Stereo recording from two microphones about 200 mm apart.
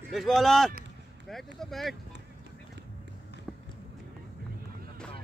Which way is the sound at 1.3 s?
Centre (ahead or behind).